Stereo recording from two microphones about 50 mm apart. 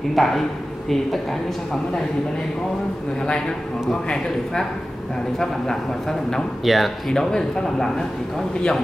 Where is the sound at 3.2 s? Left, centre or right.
Centre.